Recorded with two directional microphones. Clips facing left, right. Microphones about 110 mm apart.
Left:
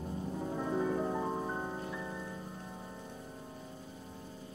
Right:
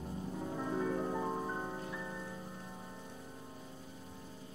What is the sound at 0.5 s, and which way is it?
Music, 15° left (ahead or behind).